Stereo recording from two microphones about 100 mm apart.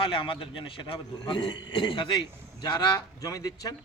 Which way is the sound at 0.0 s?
55° left (ahead or behind).